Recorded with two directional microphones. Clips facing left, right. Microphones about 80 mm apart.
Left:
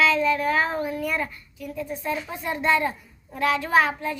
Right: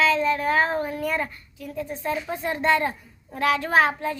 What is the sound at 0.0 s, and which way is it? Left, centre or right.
A child's voice, right.